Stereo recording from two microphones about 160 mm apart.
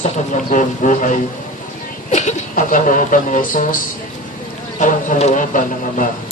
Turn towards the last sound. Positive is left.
turn(degrees=55)  # may be behind; listen again after turning